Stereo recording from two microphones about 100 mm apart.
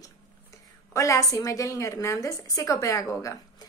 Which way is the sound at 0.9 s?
30° left (ahead or behind).